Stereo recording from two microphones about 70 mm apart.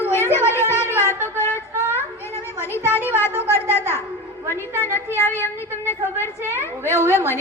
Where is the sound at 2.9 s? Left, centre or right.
Left.